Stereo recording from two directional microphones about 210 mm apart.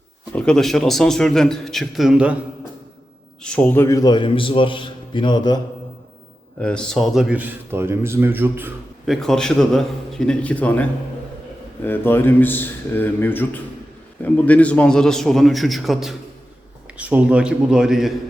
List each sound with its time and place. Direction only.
0.3 s a man's voice: 5° left (ahead or behind)
3.4 s a man's voice: 5° left (ahead or behind); by 5.5 s 20° left (ahead or behind)
6.6 s a man's voice: 5° left (ahead or behind)
9.2 s a man's voice: centre (ahead or behind)